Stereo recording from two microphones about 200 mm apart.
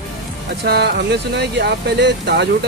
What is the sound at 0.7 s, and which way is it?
Speech, 55° right (ahead or behind).